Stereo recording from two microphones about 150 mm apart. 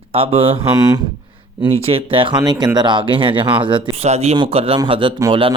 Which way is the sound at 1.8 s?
40° right (ahead or behind).